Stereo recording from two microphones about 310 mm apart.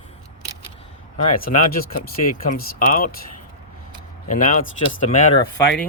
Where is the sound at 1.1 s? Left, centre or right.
Left.